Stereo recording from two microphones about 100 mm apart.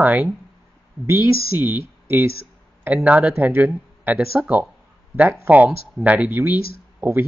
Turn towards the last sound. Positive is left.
turn(degrees=-20)  # may be behind; listen again after turning